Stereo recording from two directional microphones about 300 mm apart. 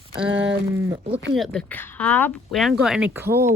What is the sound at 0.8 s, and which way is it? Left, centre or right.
Speech, centre.